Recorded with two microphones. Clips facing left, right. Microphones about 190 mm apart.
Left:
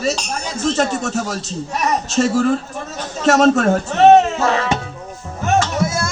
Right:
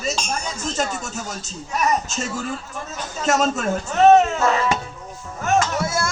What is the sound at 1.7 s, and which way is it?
Speech, 35° left (ahead or behind).